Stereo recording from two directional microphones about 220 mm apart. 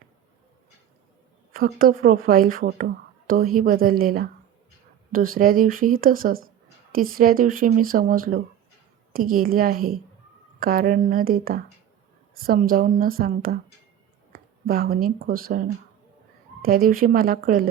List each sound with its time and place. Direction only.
1.5 s speech: 40° right (ahead or behind)